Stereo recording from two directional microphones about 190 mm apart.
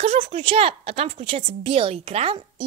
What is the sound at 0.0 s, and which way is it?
A woman's voice, 35° right (ahead or behind).